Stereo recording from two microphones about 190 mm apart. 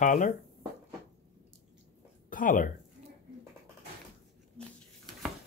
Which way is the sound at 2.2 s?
45° left (ahead or behind).